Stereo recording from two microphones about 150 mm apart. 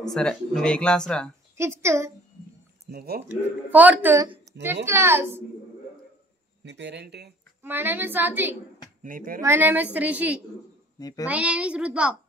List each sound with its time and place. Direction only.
0.0 s speech: 5° left (ahead or behind)
1.6 s speech: 15° right (ahead or behind)
2.9 s speech: 90° right
3.2 s speech: 10° right (ahead or behind)
7.0 s speech: 90° right
7.6 s speech: 15° right (ahead or behind)
9.0 s speech: 65° right (ahead or behind)
9.4 s speech: 15° right (ahead or behind)
11.0 s a child's voice: 25° left (ahead or behind)
11.2 s speech: 10° right (ahead or behind)